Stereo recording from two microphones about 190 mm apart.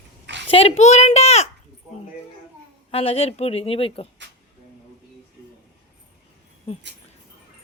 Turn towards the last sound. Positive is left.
turn(degrees=30)  # may be behind; listen again after turning